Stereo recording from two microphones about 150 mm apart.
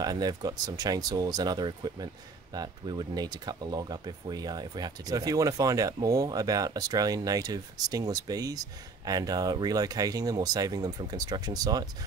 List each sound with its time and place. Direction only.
0.0 s speech: 25° right (ahead or behind)